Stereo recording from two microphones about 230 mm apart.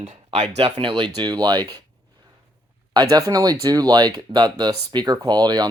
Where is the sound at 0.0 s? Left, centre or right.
Right.